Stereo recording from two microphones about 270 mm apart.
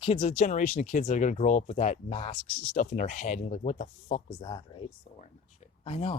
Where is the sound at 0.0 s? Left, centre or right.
Left.